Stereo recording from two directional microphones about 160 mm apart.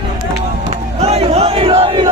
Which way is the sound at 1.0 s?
40° right (ahead or behind).